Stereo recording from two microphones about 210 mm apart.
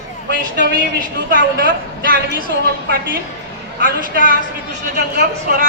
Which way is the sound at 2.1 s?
45° right (ahead or behind).